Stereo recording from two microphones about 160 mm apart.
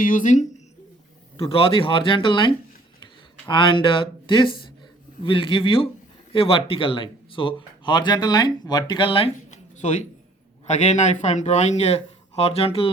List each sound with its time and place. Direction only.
0.0 s speech: 55° left (ahead or behind)
1.4 s speech: 35° left (ahead or behind)